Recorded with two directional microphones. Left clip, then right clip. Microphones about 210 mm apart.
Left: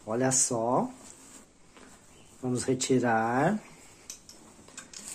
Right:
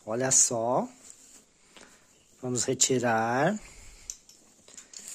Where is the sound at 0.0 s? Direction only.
50° right (ahead or behind).